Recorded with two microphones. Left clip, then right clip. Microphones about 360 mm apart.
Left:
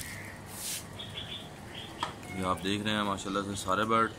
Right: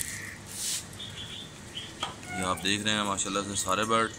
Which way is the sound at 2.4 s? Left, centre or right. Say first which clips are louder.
Right 3 dB; centre.